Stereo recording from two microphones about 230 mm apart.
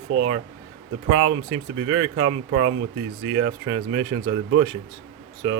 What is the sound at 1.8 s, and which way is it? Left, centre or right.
Speech, right.